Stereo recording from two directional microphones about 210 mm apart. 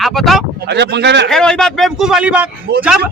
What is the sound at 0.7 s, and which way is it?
Speech, 55° right (ahead or behind).